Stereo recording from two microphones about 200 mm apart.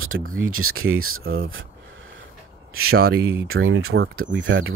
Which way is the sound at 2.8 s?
90° right.